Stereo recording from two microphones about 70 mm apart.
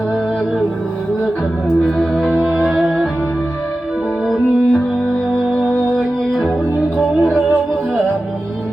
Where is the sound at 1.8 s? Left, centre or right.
Centre.